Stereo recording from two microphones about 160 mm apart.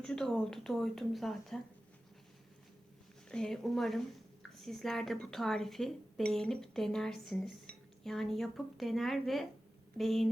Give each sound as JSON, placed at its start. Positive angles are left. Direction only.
{"t": 0.0, "sound": "speech", "side_deg": 5}
{"t": 3.2, "sound": "speech", "side_deg": 5}